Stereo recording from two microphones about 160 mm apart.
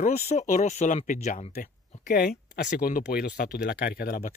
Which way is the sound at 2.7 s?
60° left (ahead or behind).